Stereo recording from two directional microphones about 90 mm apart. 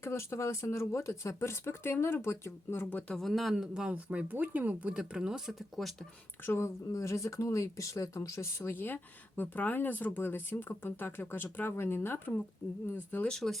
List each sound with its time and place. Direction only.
0.0 s speech: 30° left (ahead or behind)
3.2 s speech: centre (ahead or behind)
6.4 s speech: 30° left (ahead or behind)
13.2 s speech: 5° left (ahead or behind)